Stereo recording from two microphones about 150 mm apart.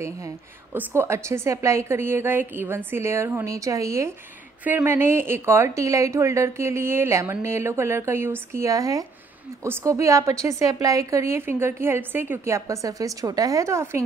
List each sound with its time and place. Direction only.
0.7 s a woman's voice: 15° right (ahead or behind)